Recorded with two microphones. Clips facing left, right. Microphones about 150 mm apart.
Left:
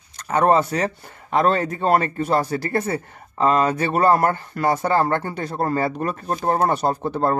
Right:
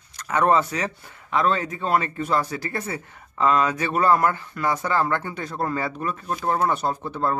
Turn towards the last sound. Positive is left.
turn(degrees=40)  # may be behind; listen again after turning